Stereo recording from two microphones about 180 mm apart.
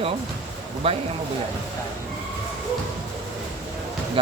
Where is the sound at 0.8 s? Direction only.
35° right (ahead or behind).